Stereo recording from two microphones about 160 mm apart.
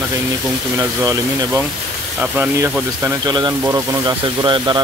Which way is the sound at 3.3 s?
25° right (ahead or behind).